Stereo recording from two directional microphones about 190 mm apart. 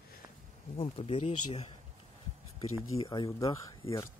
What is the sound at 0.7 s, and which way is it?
Speech, 30° left (ahead or behind).